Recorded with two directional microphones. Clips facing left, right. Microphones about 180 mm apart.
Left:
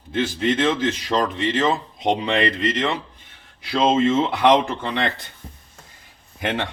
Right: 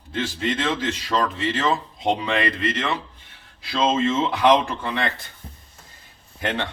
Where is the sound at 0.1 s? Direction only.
20° left (ahead or behind).